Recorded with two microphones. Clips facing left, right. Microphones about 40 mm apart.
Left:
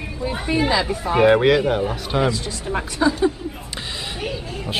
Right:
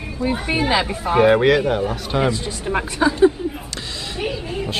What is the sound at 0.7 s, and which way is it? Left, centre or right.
Speech, right.